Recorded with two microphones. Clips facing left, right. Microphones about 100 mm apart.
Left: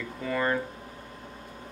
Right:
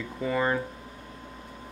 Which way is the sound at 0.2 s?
15° right (ahead or behind).